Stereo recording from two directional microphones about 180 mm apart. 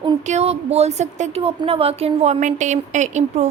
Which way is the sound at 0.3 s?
35° right (ahead or behind).